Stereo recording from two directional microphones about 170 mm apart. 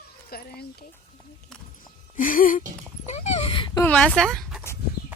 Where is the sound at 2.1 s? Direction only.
55° left (ahead or behind).